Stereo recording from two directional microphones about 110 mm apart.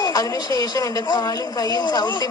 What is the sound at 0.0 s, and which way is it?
Speech, 35° left (ahead or behind).